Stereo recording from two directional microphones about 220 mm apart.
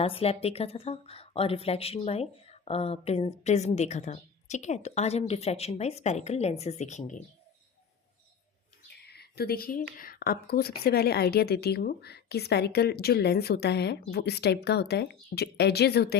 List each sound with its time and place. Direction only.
0.0 s a woman's voice: 25° left (ahead or behind)
8.9 s a sound: 45° left (ahead or behind)
10.0 s a woman's voice: 40° left (ahead or behind)